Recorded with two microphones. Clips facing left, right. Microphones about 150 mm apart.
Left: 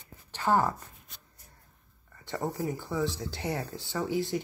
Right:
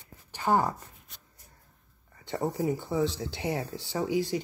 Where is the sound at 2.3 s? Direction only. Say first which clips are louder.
Right 3 dB; 20° right (ahead or behind).